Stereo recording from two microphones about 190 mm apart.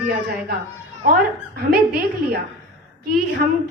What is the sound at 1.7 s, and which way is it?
Speech, 55° right (ahead or behind).